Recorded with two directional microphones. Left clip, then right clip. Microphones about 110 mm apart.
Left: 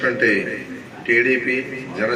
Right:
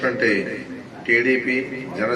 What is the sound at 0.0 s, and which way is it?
A man's voice, 30° right (ahead or behind).